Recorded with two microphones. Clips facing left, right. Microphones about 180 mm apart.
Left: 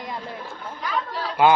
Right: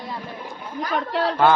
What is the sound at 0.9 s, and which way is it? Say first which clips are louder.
Speech: right 6 dB; 70° right (ahead or behind).